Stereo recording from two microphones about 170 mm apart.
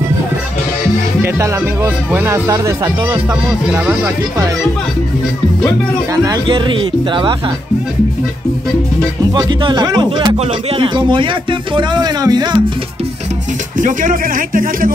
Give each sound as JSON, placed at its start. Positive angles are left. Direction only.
{"t": 1.2, "sound": "speech", "side_deg": -15}
{"t": 3.6, "sound": "speech", "side_deg": -5}
{"t": 6.2, "sound": "speech", "side_deg": -25}
{"t": 9.3, "sound": "speech", "side_deg": -25}
{"t": 10.3, "sound": "speech", "side_deg": -35}
{"t": 13.7, "sound": "speech", "side_deg": -50}